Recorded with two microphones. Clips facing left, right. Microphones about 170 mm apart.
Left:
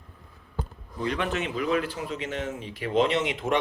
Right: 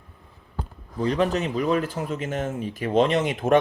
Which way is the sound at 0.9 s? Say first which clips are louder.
Right 6 dB; 35° right (ahead or behind).